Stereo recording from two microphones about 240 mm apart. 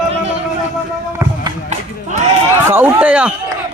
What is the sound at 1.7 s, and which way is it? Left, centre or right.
Speech, right.